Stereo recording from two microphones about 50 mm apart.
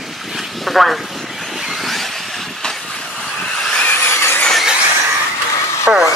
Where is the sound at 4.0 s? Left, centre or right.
Left.